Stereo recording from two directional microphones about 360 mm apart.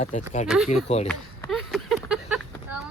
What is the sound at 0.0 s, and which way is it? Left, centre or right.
Speech, centre.